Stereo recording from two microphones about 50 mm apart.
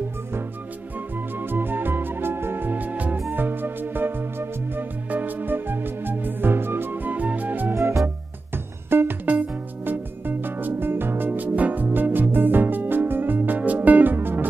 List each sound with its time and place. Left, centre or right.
1.4 s music: right
3.3 s music: right
7.7 s music: right
8.9 s music: right
9.3 s music: right